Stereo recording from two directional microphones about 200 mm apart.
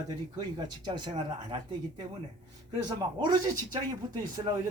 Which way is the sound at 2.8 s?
20° right (ahead or behind).